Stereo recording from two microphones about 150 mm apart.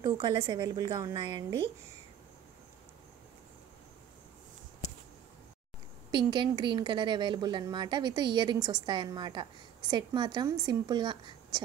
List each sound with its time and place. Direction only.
0.0 s a woman's voice: 30° right (ahead or behind)
6.1 s a woman's voice: 30° right (ahead or behind)